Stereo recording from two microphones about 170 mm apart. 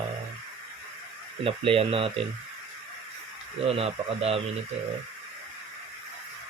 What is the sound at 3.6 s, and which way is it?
Speech, 35° right (ahead or behind).